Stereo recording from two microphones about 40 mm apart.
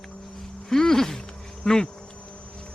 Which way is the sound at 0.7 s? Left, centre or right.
Centre.